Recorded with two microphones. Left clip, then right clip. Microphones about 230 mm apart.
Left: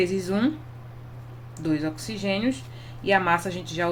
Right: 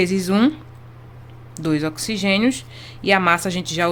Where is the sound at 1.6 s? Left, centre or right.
Right.